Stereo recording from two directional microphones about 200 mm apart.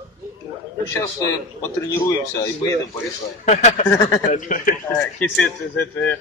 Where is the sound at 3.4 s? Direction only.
35° left (ahead or behind).